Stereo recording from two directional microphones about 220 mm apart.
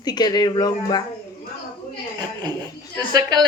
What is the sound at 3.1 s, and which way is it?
Speech, 20° right (ahead or behind).